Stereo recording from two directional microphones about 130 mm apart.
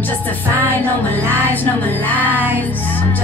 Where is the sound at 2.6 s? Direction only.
15° left (ahead or behind).